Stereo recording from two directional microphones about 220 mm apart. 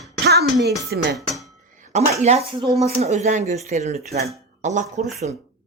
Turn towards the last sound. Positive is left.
turn(degrees=-35)  # may be behind; listen again after turning